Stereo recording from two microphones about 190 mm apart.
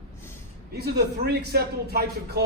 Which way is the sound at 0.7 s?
60° right (ahead or behind).